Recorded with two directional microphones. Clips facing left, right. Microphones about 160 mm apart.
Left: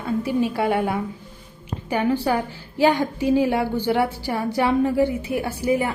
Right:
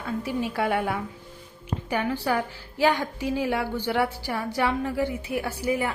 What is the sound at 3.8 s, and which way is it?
A woman's voice, 20° left (ahead or behind).